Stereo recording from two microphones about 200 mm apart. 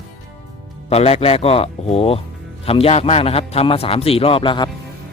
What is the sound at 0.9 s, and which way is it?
Speech, 30° left (ahead or behind).